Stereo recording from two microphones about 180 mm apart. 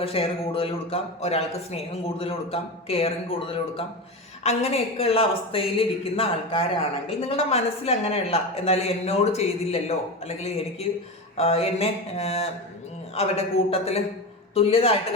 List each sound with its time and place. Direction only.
0.0 s a man's voice: 30° left (ahead or behind)